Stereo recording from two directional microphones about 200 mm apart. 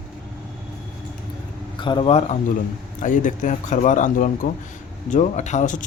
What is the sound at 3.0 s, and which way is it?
A man's voice, 40° left (ahead or behind).